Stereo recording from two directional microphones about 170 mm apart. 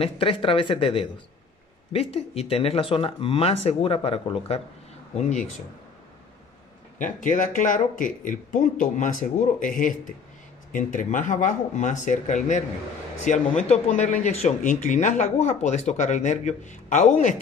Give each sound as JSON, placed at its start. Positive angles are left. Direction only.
{"t": 0.0, "sound": "speech", "side_deg": 30}
{"t": 7.0, "sound": "speech", "side_deg": 50}